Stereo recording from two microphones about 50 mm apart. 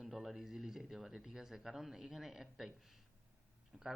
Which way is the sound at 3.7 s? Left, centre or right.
Centre.